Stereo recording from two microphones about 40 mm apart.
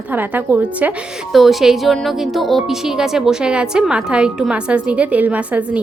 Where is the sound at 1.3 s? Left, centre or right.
Centre.